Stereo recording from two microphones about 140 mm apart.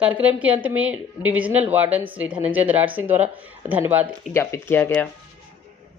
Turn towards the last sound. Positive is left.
turn(degrees=15)  # may be behind; listen again after turning